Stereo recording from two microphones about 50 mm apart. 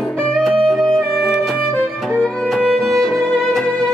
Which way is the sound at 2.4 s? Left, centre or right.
Centre.